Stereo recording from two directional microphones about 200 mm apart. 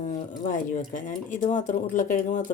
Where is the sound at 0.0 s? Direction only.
40° left (ahead or behind).